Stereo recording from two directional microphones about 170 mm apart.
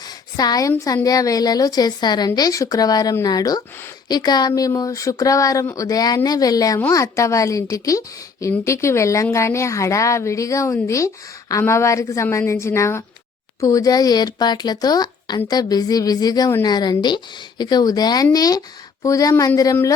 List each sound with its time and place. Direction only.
0.3 s speech: 20° left (ahead or behind)